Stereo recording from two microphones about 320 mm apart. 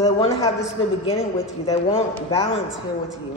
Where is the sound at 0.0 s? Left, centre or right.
Centre.